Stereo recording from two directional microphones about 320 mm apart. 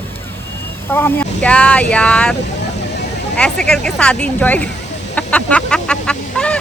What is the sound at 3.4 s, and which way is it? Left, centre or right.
Speech, centre.